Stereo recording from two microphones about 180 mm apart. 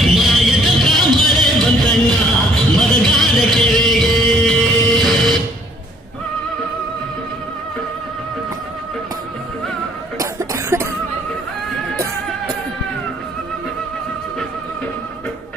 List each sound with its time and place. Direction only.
0.0 s music: centre (ahead or behind)
10.2 s cough: 15° right (ahead or behind)